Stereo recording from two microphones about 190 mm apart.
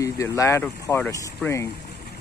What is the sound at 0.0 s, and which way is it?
Speech, 15° left (ahead or behind).